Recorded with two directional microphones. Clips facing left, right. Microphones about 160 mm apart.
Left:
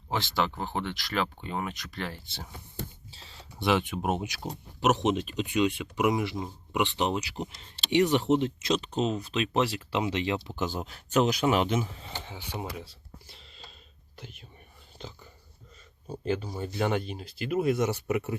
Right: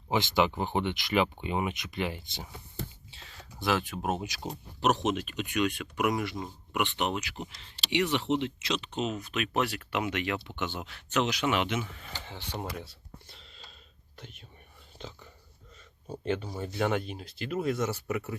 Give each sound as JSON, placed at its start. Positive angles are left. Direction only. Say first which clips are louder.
{"t": 0.1, "sound": "speech", "louder": "right 3 dB", "side_deg": -15}
{"t": 3.9, "sound": "speech", "louder": "left 2 dB", "side_deg": 10}
{"t": 4.9, "sound": "speech", "louder": "left 3 dB", "side_deg": 25}
{"t": 12.2, "sound": "speech", "louder": "right 1 dB", "side_deg": 5}